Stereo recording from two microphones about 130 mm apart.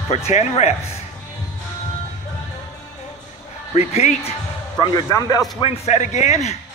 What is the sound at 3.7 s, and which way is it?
Speech, 55° left (ahead or behind).